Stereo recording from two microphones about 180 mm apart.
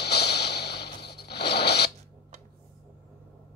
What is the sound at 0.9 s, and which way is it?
Zipper, 65° left (ahead or behind).